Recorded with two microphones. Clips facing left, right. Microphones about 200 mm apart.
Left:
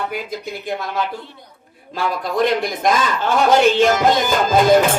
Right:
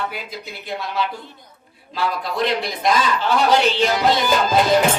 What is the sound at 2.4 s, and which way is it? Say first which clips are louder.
A man's voice: left 4 dB; 50° left (ahead or behind).